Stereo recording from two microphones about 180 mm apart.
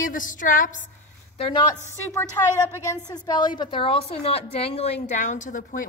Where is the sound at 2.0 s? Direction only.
15° left (ahead or behind).